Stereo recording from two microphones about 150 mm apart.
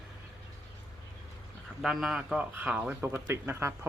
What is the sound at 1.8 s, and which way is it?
Speech, centre (ahead or behind).